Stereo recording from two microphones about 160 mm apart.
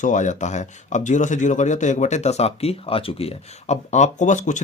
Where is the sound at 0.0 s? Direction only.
50° left (ahead or behind).